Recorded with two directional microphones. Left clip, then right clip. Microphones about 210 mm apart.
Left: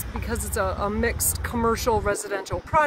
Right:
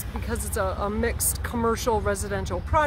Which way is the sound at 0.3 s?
Centre (ahead or behind).